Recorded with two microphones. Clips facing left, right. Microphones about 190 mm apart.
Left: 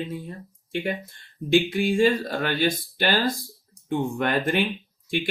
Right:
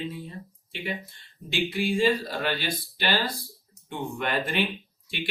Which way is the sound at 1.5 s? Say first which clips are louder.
Left 6 dB; 50° left (ahead or behind).